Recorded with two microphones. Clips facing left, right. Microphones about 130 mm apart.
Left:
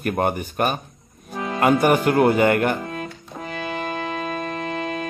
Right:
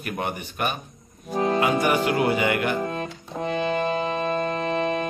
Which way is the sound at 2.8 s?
40° right (ahead or behind).